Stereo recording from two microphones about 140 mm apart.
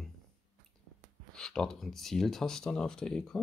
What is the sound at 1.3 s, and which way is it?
Speech, 5° left (ahead or behind).